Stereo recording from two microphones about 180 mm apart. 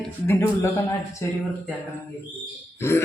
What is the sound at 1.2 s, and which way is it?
Speech, 15° left (ahead or behind).